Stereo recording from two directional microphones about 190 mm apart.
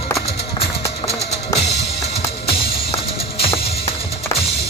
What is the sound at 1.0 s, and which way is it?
Music, 25° left (ahead or behind).